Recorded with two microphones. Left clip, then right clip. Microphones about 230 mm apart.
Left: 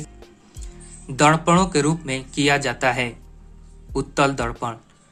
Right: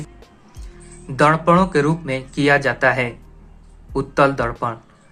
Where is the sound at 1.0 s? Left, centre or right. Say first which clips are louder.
Right 2 dB; left.